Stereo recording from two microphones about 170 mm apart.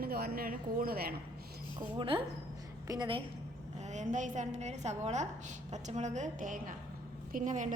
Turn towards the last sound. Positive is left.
turn(degrees=-45)  # may be behind; listen again after turning